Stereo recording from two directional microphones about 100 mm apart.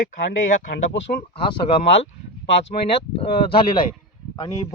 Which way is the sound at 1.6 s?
90° left.